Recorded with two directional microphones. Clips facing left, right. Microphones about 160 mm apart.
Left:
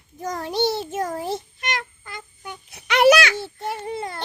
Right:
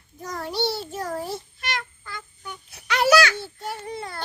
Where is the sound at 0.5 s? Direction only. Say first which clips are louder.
Left 4 dB; 20° left (ahead or behind).